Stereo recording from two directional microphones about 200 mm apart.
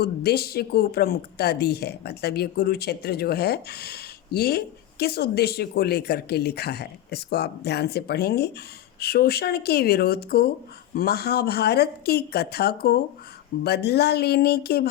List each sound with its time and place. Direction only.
0.0 s a woman's voice: 50° left (ahead or behind)